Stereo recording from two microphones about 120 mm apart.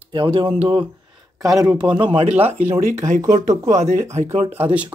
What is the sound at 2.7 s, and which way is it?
Speech, 90° right.